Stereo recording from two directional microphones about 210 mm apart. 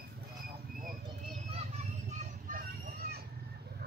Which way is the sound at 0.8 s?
45° right (ahead or behind).